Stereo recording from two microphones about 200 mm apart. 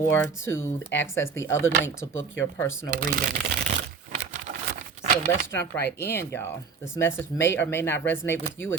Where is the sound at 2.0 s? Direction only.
80° left.